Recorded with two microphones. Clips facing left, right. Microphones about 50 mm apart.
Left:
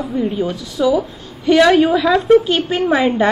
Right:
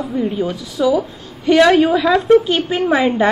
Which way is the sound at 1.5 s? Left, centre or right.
Centre.